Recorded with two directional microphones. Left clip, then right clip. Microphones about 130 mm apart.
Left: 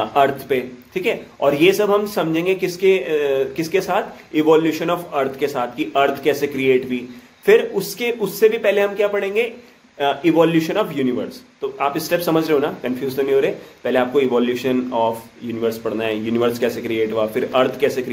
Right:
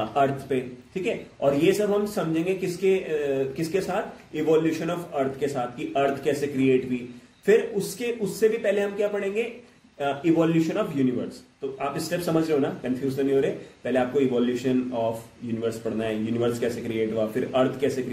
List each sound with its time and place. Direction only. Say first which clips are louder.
0.1 s a man's voice: left 7 dB; 15° right (ahead or behind)
16.0 s a man's voice: left 7 dB; 15° right (ahead or behind)